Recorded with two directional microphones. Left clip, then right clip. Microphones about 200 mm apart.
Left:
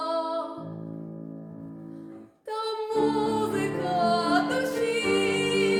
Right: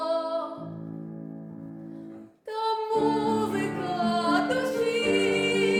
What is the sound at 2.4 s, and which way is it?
Music, 15° left (ahead or behind).